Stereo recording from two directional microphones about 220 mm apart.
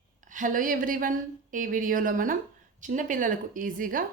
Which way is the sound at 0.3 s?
35° right (ahead or behind).